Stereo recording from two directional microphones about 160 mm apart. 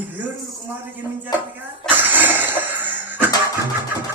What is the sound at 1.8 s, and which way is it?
Cough, 10° right (ahead or behind).